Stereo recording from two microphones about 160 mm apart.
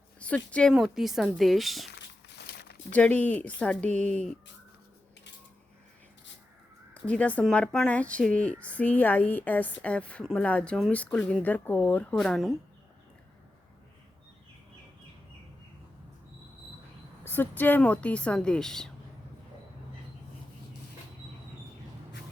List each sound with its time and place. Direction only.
0.2 s a woman's voice: 5° left (ahead or behind)
1.9 s a sound: 90° left
2.9 s speech: 10° left (ahead or behind)
6.9 s a woman's voice: 10° left (ahead or behind)
17.2 s speech: 15° left (ahead or behind)